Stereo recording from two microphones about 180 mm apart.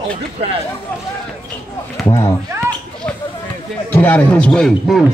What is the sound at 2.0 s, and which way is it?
Speech, 20° left (ahead or behind).